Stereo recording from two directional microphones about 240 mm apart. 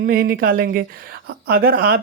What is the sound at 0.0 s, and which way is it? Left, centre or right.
Speech, right.